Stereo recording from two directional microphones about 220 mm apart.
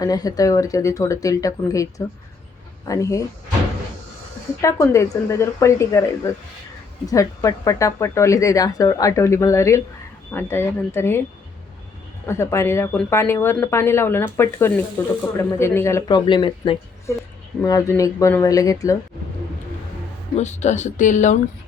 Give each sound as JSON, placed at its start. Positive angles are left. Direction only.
{"t": 0.0, "sound": "speech", "side_deg": 15}
{"t": 4.6, "sound": "speech", "side_deg": 15}
{"t": 12.2, "sound": "speech", "side_deg": 10}
{"t": 20.3, "sound": "speech", "side_deg": 30}